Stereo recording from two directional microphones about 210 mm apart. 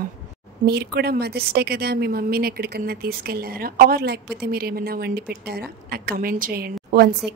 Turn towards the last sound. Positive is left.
turn(degrees=-45)  # may be behind; listen again after turning